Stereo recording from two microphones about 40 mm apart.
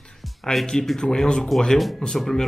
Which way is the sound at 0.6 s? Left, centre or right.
Centre.